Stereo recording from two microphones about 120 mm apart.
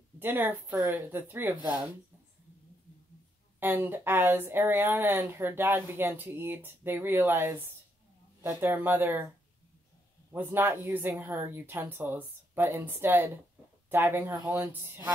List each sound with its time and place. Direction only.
0.2 s a woman's voice: 15° right (ahead or behind)
3.5 s a woman's voice: 15° right (ahead or behind)
10.3 s a woman's voice: 15° right (ahead or behind)